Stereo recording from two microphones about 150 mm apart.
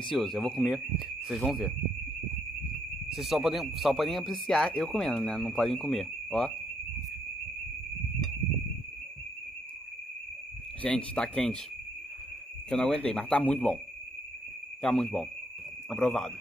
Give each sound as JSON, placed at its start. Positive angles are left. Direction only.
{"t": 0.0, "sound": "speech", "side_deg": 0}
{"t": 3.1, "sound": "speech", "side_deg": 0}
{"t": 10.8, "sound": "speech", "side_deg": 10}
{"t": 12.6, "sound": "speech", "side_deg": 5}
{"t": 14.8, "sound": "speech", "side_deg": 5}